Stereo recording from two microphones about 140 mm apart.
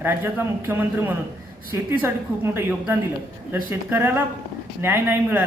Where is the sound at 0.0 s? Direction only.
15° right (ahead or behind).